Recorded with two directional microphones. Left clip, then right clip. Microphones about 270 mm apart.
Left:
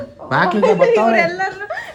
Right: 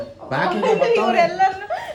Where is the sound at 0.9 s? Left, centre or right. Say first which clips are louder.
Left 3 dB; left.